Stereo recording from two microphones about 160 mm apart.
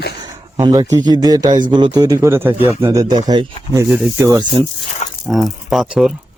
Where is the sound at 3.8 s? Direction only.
5° right (ahead or behind).